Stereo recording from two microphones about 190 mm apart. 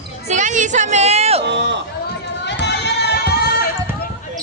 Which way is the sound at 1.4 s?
65° right (ahead or behind).